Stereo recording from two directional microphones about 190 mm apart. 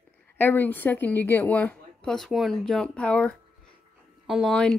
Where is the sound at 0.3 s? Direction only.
10° left (ahead or behind).